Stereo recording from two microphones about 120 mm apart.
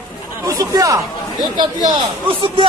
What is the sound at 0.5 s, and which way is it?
A man's voice, 30° right (ahead or behind).